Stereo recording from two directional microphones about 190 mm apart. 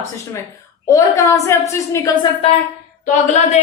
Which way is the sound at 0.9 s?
15° left (ahead or behind).